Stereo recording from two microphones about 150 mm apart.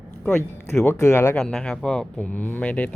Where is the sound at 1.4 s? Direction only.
5° left (ahead or behind).